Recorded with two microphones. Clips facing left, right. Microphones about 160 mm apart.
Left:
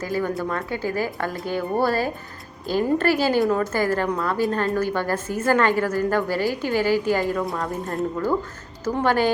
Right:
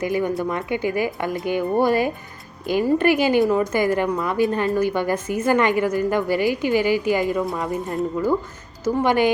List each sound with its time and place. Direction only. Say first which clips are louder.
0.0 s a woman's voice: right 3 dB; 15° right (ahead or behind)
7.4 s speech: right 2 dB; centre (ahead or behind)
8.8 s a woman's voice: right 2 dB; 15° right (ahead or behind)